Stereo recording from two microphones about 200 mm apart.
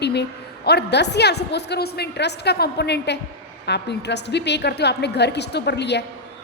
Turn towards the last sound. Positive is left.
turn(degrees=60)  # may be behind; listen again after turning